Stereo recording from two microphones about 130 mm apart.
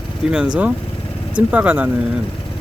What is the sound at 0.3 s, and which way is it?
Speech, 5° right (ahead or behind).